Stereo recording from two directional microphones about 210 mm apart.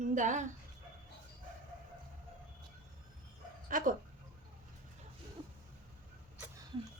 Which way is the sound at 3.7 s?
40° right (ahead or behind).